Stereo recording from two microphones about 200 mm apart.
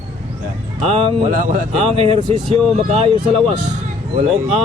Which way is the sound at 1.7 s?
30° right (ahead or behind).